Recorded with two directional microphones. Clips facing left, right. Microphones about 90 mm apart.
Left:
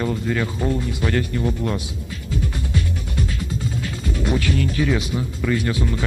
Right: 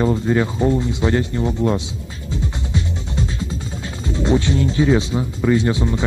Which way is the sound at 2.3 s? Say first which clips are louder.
Right 1 dB; 25° right (ahead or behind).